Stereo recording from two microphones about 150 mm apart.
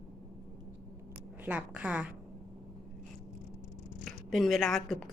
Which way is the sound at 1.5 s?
10° right (ahead or behind).